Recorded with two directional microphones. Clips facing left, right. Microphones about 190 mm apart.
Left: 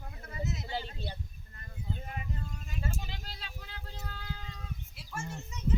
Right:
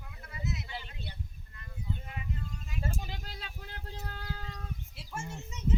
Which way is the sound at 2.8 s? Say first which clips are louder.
Right 2 dB; 50° right (ahead or behind).